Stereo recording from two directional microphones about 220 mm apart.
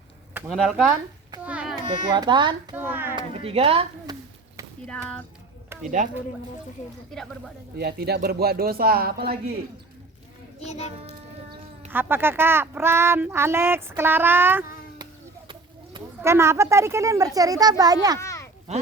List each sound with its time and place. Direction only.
0.3 s speech: 5° right (ahead or behind)
1.5 s a sound: 5° right (ahead or behind)
1.7 s speech: 20° right (ahead or behind)
2.7 s speech: 10° right (ahead or behind)
3.2 s a sound: 25° right (ahead or behind)
4.9 s speech: 5° left (ahead or behind)
6.0 s speech: 35° right (ahead or behind)
7.1 s speech: centre (ahead or behind)
7.8 s a man's voice: 45° right (ahead or behind)
10.6 s a child's voice: 30° left (ahead or behind)
11.9 s speech: 10° right (ahead or behind)
15.4 s speech: 20° right (ahead or behind)
18.2 s a sound: 15° left (ahead or behind)
18.7 s speech: 30° right (ahead or behind)